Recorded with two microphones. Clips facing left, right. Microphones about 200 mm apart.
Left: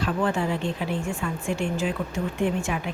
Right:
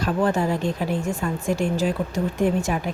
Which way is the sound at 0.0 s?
40° right (ahead or behind).